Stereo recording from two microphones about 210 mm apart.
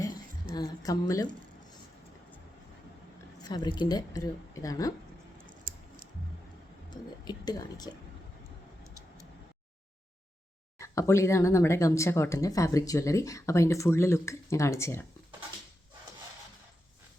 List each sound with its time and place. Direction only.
0.5 s speech: 20° left (ahead or behind)
3.4 s speech: 20° left (ahead or behind)
5.5 s a sound: 40° right (ahead or behind)
6.9 s speech: 20° left (ahead or behind)
10.8 s speech: 15° left (ahead or behind)